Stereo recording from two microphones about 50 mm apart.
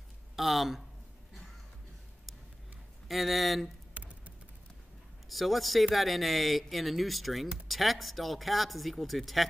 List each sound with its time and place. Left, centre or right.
0.4 s speech: centre
3.1 s speech: centre
3.9 s music: right
5.3 s speech: centre